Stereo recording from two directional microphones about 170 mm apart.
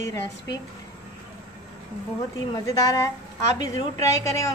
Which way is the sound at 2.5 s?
20° left (ahead or behind).